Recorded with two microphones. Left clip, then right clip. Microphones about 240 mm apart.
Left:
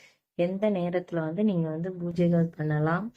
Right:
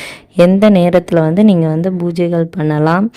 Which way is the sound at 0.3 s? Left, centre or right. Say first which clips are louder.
Right 18 dB; right.